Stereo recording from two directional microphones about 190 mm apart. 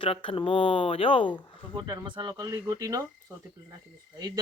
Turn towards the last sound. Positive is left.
turn(degrees=-20)  # may be behind; listen again after turning